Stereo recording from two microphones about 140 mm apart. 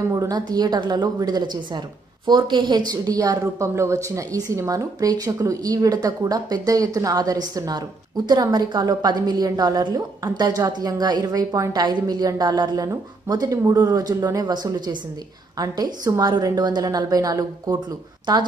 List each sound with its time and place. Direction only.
0.1 s a woman's voice: 25° right (ahead or behind)